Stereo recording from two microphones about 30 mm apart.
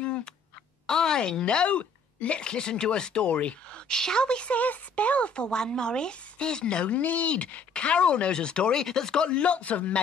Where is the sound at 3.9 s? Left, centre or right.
Left.